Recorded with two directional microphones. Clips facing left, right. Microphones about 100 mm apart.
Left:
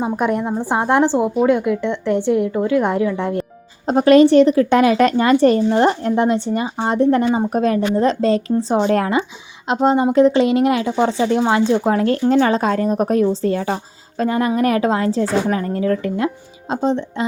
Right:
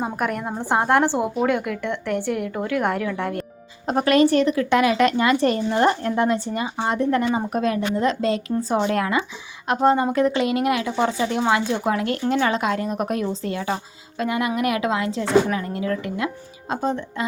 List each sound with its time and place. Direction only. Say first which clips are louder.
0.2 s speech: left 7 dB; 25° left (ahead or behind)
0.6 s a woman's voice: left 1 dB; 10° left (ahead or behind)
2.5 s speech: left 7 dB; 5° left (ahead or behind)
2.8 s a woman's voice: left 5 dB; 15° left (ahead or behind)
3.8 s speech: left 7 dB; 30° left (ahead or behind)